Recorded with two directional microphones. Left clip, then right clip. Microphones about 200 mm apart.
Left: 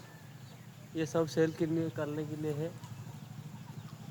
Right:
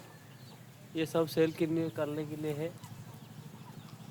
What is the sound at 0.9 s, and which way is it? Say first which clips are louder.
Speech: right 1 dB; 5° left (ahead or behind).